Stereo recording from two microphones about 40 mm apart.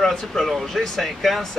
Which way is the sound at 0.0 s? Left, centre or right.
Centre.